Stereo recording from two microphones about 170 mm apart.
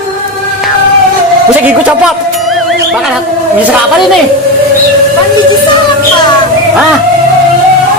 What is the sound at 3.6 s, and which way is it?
Speech, 10° right (ahead or behind).